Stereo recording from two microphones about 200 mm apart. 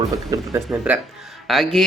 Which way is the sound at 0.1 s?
15° right (ahead or behind).